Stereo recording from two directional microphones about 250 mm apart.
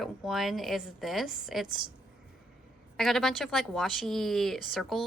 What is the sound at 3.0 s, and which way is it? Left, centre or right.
A woman's voice, centre.